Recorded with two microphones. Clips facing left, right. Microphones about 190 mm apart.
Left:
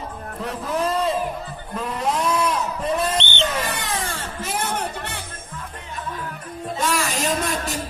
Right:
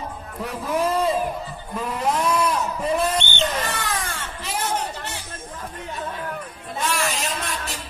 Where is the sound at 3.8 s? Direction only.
25° left (ahead or behind).